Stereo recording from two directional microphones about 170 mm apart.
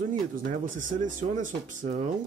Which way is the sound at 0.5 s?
50° right (ahead or behind).